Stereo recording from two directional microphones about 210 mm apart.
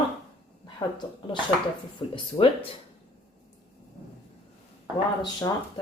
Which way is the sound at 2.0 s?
20° left (ahead or behind).